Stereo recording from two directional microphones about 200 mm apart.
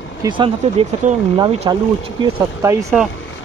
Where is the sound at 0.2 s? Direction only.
25° right (ahead or behind).